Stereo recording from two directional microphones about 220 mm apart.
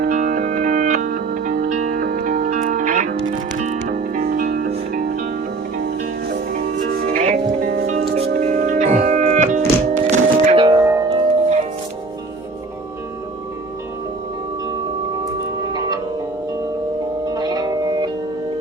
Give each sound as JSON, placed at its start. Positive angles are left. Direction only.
{"t": 0.0, "sound": "music", "side_deg": -35}
{"t": 6.5, "sound": "music", "side_deg": -40}
{"t": 17.2, "sound": "music", "side_deg": -20}